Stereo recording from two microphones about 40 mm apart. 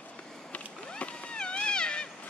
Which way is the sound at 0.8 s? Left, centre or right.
Left.